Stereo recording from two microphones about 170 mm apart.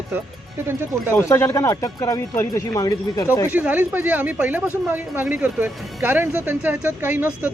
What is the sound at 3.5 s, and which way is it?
Speech, 10° right (ahead or behind).